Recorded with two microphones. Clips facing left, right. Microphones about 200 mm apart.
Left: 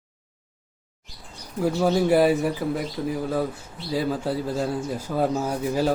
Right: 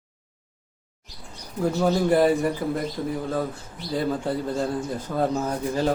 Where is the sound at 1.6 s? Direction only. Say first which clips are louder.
Left 1 dB; 5° left (ahead or behind).